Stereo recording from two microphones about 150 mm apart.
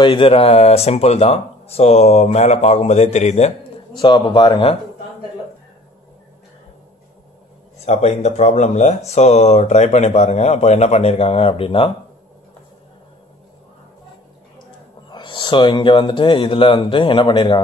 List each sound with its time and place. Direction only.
0.0 s speech: 35° left (ahead or behind)
3.9 s speech: 30° left (ahead or behind)
7.8 s speech: 45° left (ahead or behind)
15.0 s speech: 30° left (ahead or behind)